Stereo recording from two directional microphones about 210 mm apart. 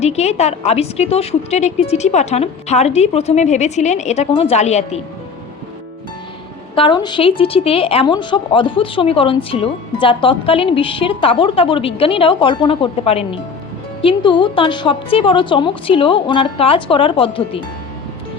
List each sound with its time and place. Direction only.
0.0 s a woman's voice: 30° left (ahead or behind)
6.7 s a woman's voice: 20° left (ahead or behind)